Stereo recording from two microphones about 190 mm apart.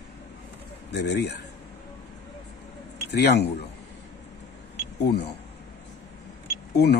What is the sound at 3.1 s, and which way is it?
Speech, 60° left (ahead or behind).